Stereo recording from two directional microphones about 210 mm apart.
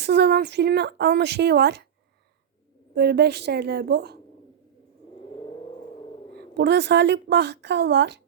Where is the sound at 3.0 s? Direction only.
50° right (ahead or behind).